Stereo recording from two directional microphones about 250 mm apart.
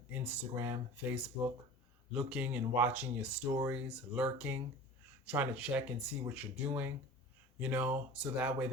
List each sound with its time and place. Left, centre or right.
0.1 s speech: centre